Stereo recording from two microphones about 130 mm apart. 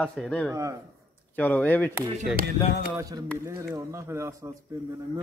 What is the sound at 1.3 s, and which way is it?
Speech, 10° left (ahead or behind).